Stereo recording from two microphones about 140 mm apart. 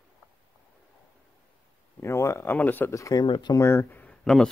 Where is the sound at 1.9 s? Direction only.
20° left (ahead or behind).